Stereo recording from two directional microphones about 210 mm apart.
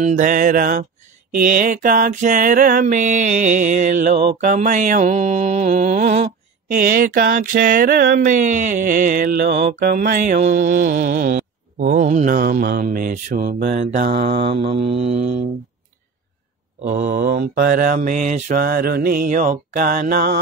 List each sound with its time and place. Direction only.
0.0 s mantra: 40° right (ahead or behind)
14.4 s mantra: 30° right (ahead or behind)
16.8 s mantra: 40° right (ahead or behind)